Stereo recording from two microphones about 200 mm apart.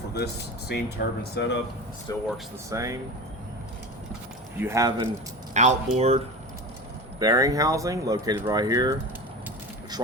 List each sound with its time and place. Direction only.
0.7 s speech: 55° left (ahead or behind)
2.1 s speech: 15° left (ahead or behind)
2.6 s speech: 15° right (ahead or behind)
4.5 s speech: 15° right (ahead or behind)
5.5 s speech: 35° right (ahead or behind)
7.2 s speech: 15° right (ahead or behind)